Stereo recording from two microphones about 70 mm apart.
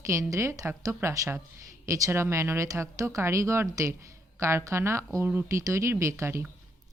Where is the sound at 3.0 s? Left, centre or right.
Right.